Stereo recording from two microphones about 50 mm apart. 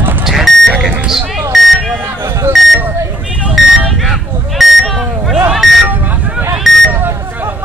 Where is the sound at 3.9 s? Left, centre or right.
Centre.